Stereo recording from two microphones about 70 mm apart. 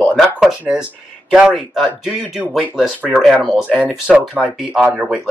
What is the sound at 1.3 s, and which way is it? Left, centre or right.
Speech, centre.